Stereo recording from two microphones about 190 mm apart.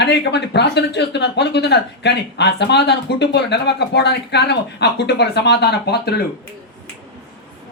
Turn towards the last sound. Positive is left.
turn(degrees=60)  # may be behind; listen again after turning